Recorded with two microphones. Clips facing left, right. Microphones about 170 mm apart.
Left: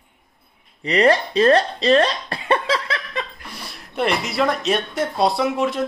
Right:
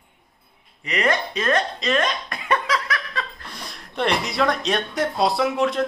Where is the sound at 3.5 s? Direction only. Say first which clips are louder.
Left 3 dB; 5° left (ahead or behind).